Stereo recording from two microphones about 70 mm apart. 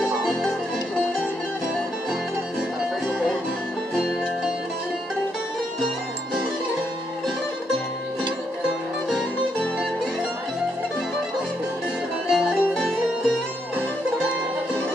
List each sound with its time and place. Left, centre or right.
0.0 s music: centre
12.3 s music: centre